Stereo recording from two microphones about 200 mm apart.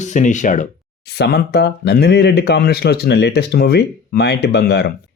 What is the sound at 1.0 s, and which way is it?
Speech, 55° left (ahead or behind).